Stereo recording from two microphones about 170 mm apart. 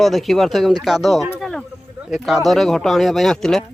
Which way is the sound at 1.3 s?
Centre (ahead or behind).